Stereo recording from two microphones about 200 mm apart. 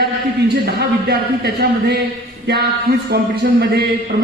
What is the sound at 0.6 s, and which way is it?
A man's voice, 55° right (ahead or behind).